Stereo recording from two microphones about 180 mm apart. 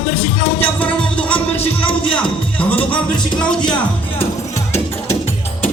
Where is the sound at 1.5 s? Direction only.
30° left (ahead or behind).